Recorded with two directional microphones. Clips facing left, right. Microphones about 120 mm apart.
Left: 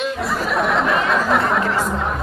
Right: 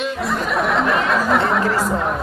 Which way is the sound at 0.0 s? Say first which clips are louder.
Even; centre (ahead or behind).